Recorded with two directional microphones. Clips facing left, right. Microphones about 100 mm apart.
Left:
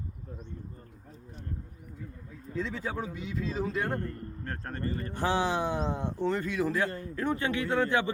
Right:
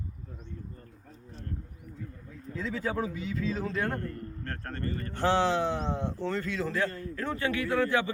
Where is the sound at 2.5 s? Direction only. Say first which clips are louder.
Right 1 dB; centre (ahead or behind).